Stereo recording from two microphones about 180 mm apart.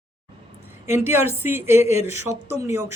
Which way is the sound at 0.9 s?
15° right (ahead or behind).